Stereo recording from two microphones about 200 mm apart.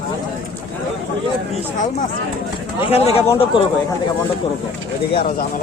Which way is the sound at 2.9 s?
30° left (ahead or behind).